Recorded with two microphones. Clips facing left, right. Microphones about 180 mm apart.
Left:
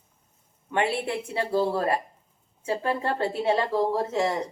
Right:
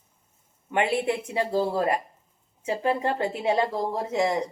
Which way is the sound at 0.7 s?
20° right (ahead or behind).